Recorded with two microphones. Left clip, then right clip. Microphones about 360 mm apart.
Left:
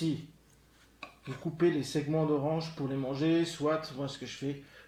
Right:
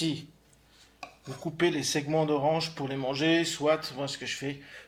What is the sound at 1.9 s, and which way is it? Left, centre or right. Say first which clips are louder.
Speech: right 3 dB; right.